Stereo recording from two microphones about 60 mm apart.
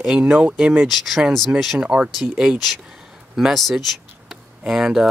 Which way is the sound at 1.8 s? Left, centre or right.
Centre.